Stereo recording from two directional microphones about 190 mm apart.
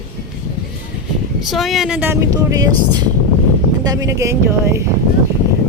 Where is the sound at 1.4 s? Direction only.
Centre (ahead or behind); by 2.7 s 20° right (ahead or behind).